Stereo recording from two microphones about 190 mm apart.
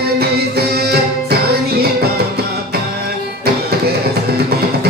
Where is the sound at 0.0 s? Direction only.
55° right (ahead or behind).